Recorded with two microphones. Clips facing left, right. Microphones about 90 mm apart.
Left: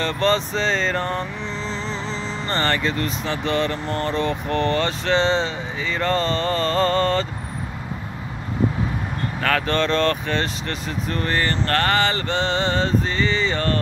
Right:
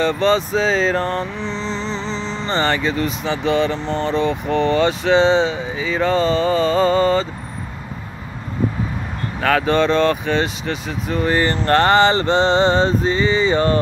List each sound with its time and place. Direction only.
0.0 s music: 5° right (ahead or behind)
9.4 s speech: 5° right (ahead or behind)